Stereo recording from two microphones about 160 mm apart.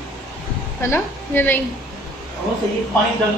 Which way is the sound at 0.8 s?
15° left (ahead or behind).